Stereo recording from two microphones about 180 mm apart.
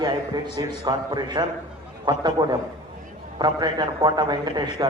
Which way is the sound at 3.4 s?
25° right (ahead or behind).